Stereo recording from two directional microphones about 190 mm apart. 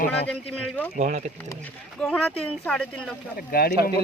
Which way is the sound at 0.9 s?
40° right (ahead or behind).